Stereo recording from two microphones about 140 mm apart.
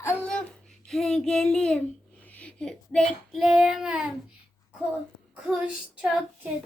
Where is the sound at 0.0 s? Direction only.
15° left (ahead or behind).